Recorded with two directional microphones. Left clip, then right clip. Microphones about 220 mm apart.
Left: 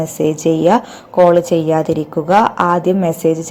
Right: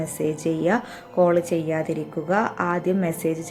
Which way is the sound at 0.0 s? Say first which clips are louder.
Left 10 dB; 15° left (ahead or behind).